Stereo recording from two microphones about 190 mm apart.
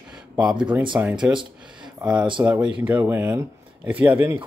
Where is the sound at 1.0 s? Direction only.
5° right (ahead or behind).